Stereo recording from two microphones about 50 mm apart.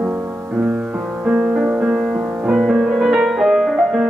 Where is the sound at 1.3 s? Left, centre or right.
Centre.